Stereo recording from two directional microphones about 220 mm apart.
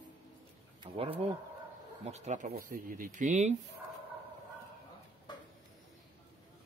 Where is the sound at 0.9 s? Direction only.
25° right (ahead or behind).